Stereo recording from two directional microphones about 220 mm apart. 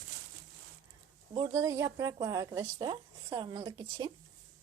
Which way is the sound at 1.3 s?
20° right (ahead or behind).